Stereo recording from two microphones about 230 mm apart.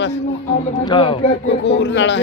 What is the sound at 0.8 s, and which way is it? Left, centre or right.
Speech, left.